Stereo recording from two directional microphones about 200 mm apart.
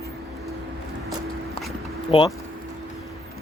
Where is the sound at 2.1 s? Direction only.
25° left (ahead or behind).